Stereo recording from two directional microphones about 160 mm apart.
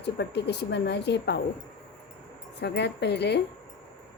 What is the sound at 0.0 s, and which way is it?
Speech, 90° left.